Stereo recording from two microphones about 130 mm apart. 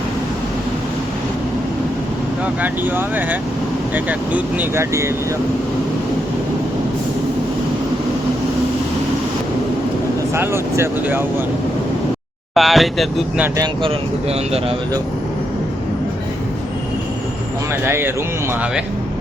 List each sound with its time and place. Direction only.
2.6 s speech: 15° right (ahead or behind)
10.3 s speech: 20° right (ahead or behind)
12.5 s speech: centre (ahead or behind)
13.8 s speech: 50° right (ahead or behind)
17.8 s speech: 20° right (ahead or behind)